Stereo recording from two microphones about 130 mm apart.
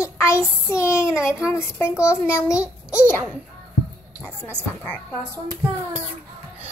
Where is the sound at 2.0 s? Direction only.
20° left (ahead or behind).